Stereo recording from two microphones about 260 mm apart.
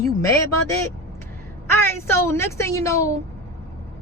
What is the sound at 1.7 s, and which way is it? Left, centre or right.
Speech, centre.